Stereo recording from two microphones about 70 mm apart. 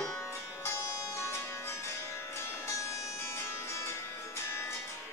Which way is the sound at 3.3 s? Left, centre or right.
Left.